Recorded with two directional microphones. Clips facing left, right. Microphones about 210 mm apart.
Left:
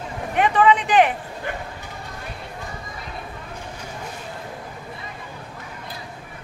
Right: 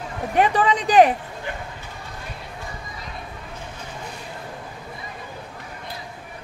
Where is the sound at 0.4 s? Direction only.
35° right (ahead or behind).